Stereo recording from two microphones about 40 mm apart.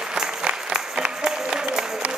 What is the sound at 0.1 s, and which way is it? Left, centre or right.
Applause, centre.